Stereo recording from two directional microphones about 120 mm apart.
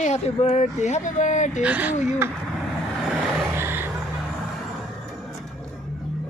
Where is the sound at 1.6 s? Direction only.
15° right (ahead or behind).